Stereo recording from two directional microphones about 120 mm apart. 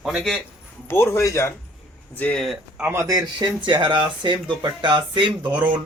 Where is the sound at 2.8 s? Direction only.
25° right (ahead or behind); by 5.6 s 40° right (ahead or behind).